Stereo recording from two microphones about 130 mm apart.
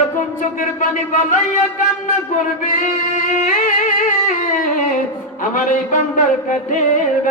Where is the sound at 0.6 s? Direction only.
80° left.